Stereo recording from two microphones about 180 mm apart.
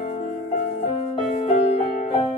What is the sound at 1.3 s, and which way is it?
Music, 40° left (ahead or behind).